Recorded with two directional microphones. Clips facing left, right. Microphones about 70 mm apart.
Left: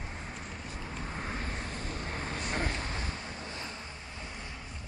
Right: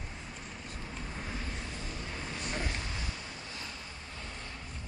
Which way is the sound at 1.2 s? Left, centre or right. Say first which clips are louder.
Left 3 dB; left.